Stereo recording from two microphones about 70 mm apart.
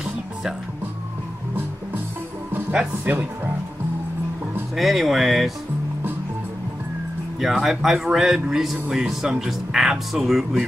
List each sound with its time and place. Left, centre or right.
0.0 s music: centre
2.7 s speech: centre
4.7 s speech: centre
7.3 s speech: centre